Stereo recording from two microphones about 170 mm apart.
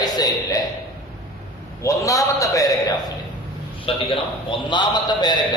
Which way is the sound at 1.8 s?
20° left (ahead or behind).